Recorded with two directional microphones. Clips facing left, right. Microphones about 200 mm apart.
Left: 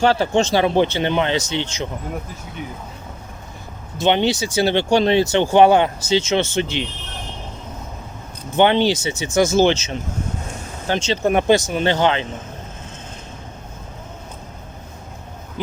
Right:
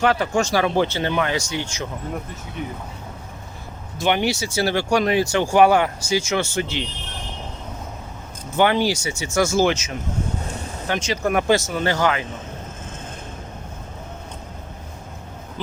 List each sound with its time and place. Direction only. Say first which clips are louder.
0.0 s speech: left 3 dB; 30° left (ahead or behind)
4.0 s speech: left 3 dB; 20° left (ahead or behind)
8.5 s speech: left 3 dB; 25° left (ahead or behind)
15.6 s a sound: left 4 dB; 15° left (ahead or behind)